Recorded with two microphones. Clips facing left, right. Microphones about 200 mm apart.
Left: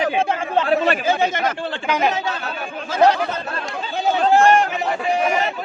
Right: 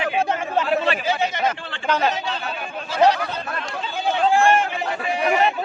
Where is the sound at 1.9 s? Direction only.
15° left (ahead or behind).